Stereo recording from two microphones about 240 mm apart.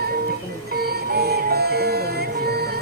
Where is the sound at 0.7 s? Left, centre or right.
Right.